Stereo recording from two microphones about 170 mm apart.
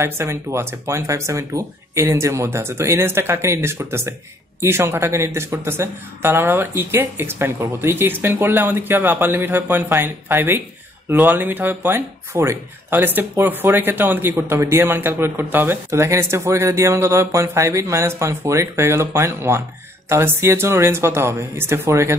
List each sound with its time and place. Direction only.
0.0 s speech: 15° right (ahead or behind)